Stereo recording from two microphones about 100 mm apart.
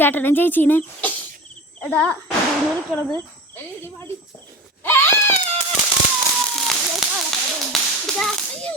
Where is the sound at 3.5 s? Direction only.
25° left (ahead or behind).